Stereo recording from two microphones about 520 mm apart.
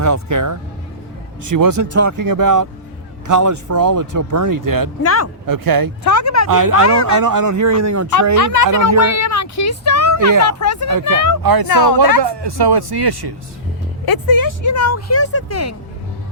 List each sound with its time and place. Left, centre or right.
0.0 s speech: right
5.0 s speech: left
5.5 s speech: right
6.0 s speech: left
6.5 s speech: right
8.4 s speech: left
10.1 s a sound: right
10.4 s speech: left
10.8 s speech: right
14.0 s speech: left